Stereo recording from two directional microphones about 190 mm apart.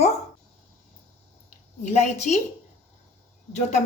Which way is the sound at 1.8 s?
40° left (ahead or behind).